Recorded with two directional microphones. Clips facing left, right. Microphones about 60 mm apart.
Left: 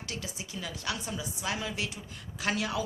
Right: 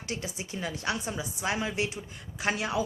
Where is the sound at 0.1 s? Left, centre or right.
Right.